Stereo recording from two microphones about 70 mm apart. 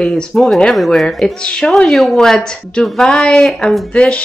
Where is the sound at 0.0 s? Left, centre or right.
Centre.